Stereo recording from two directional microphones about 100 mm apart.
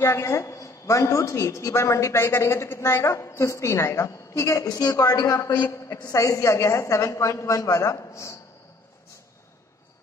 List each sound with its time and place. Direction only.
0.0 s a woman's voice: 25° left (ahead or behind)